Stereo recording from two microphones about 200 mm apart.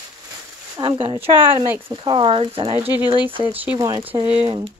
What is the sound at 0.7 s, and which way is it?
Speech, 25° right (ahead or behind).